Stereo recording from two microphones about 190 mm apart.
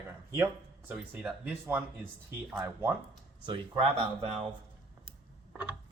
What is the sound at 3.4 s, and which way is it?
Speech, 25° right (ahead or behind).